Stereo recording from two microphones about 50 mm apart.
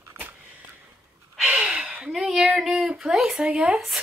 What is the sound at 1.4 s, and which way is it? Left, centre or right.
Gasp, right.